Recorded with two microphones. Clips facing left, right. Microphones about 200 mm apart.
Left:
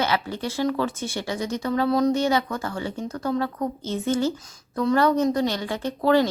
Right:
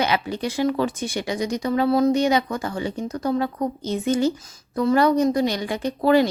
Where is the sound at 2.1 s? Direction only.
15° right (ahead or behind).